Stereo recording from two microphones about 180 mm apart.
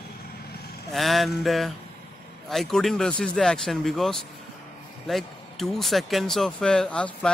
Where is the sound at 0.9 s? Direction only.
Centre (ahead or behind).